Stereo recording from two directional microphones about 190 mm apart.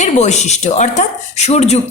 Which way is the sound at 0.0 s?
35° left (ahead or behind).